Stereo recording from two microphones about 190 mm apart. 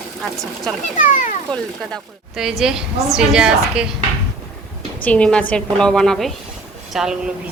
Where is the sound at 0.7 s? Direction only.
5° left (ahead or behind).